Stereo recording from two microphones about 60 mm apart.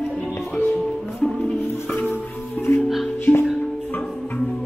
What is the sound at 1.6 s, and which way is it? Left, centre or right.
Music, left.